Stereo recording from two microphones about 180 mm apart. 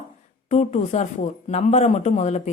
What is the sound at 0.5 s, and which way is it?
Speech, 40° left (ahead or behind).